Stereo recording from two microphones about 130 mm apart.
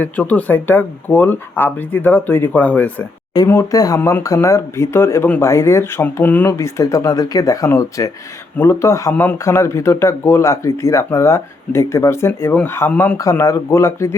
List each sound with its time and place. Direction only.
0.0 s speech: 10° left (ahead or behind)
3.3 s speech: 25° left (ahead or behind)